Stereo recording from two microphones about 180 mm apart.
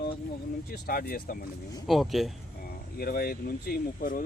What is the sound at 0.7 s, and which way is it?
Speech, 55° left (ahead or behind).